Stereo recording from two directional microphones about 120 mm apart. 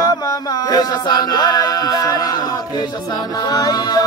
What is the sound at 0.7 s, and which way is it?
Music, 35° left (ahead or behind).